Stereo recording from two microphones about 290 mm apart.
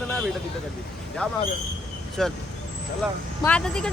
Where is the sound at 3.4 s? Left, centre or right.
Centre.